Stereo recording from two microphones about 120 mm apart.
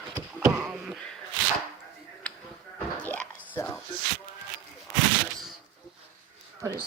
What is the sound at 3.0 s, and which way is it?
Whispering, 15° left (ahead or behind).